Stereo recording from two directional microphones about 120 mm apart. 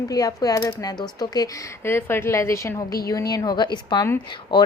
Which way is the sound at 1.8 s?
20° left (ahead or behind).